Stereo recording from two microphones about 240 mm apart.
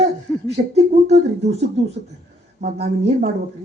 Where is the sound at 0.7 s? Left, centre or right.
Right.